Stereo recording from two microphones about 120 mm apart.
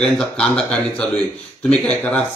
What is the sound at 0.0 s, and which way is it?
Speech, 10° left (ahead or behind).